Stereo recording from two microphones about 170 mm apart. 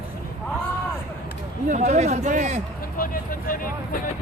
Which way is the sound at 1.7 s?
45° right (ahead or behind).